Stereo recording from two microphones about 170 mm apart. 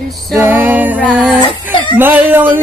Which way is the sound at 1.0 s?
Centre (ahead or behind).